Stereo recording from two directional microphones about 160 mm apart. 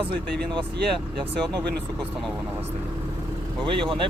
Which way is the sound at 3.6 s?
30° right (ahead or behind).